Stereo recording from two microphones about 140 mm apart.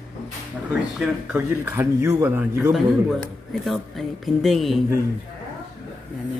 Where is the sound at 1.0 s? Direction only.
15° right (ahead or behind).